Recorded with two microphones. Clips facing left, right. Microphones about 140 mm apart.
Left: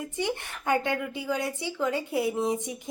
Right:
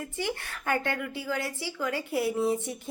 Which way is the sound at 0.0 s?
20° left (ahead or behind).